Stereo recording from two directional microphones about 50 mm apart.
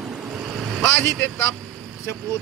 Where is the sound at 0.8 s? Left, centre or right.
Left.